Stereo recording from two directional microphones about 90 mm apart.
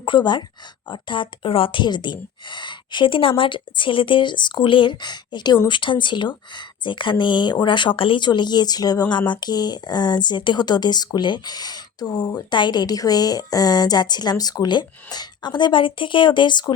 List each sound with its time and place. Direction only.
0.0 s speech: 60° left (ahead or behind)
12.4 s a woman's voice: 55° left (ahead or behind)